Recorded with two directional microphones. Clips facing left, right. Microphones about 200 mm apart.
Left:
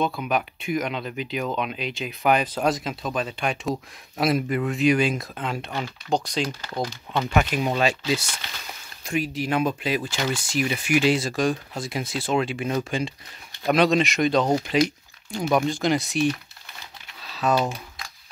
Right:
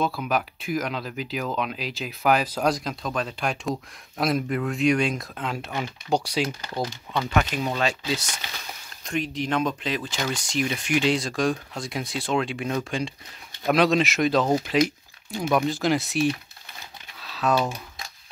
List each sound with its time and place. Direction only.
0.0 s speech: centre (ahead or behind)
6.7 s speech: 10° left (ahead or behind)
9.0 s speech: 5° left (ahead or behind)
17.2 s typing: centre (ahead or behind)